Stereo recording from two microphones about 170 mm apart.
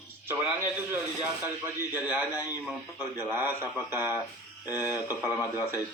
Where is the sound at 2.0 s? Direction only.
10° right (ahead or behind).